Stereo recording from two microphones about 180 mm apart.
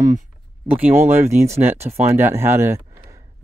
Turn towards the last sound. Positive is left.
turn(degrees=-15)  # may be behind; listen again after turning